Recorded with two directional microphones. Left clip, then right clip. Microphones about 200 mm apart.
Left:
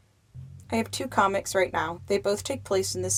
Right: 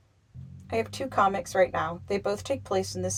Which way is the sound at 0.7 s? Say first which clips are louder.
Left 1 dB; 35° left (ahead or behind).